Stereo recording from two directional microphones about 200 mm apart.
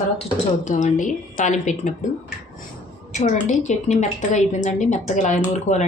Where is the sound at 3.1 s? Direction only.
35° left (ahead or behind).